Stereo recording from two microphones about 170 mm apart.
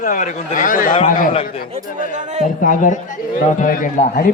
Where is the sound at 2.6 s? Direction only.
50° left (ahead or behind).